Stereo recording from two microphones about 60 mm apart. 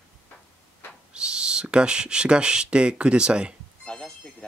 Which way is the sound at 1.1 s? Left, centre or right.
Centre.